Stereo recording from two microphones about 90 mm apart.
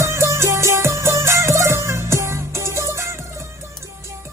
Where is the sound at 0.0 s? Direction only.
35° right (ahead or behind).